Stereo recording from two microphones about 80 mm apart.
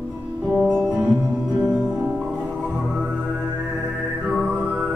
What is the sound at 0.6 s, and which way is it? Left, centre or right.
Music, right.